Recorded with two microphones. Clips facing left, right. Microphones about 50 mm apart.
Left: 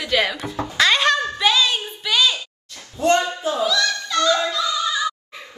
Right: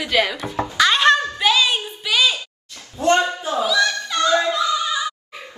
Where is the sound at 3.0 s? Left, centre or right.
Right.